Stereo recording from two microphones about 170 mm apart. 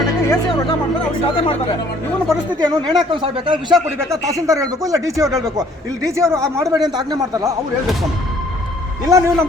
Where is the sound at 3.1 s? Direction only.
30° right (ahead or behind).